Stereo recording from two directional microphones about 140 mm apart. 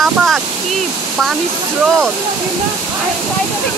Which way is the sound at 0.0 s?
Centre (ahead or behind).